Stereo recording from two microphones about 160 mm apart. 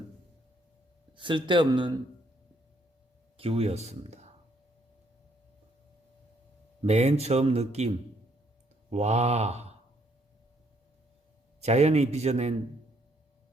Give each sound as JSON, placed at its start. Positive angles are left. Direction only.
{"t": 1.1, "sound": "speech", "side_deg": -30}
{"t": 3.3, "sound": "speech", "side_deg": -35}
{"t": 6.8, "sound": "a man's voice", "side_deg": -40}
{"t": 11.6, "sound": "a man's voice", "side_deg": -40}